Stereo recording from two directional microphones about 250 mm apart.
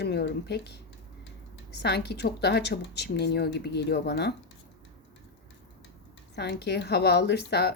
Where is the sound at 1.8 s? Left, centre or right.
Left.